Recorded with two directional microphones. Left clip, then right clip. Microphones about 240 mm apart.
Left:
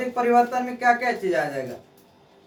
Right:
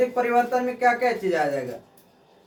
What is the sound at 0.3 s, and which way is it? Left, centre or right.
Speech, centre.